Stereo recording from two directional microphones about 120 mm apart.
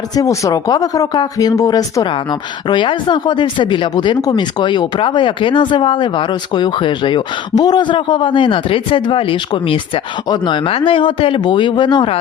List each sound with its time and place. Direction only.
0.2 s speech: 30° left (ahead or behind)
2.6 s speech: 40° left (ahead or behind)